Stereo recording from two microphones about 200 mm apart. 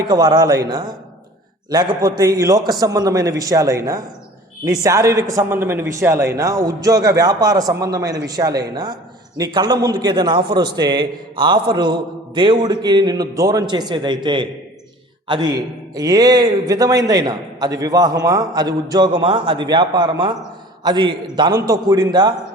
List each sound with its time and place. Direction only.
0.1 s a man's voice: 20° right (ahead or behind)